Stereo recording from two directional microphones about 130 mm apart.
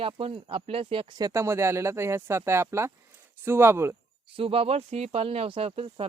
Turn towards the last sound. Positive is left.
turn(degrees=-50)  # may be behind; listen again after turning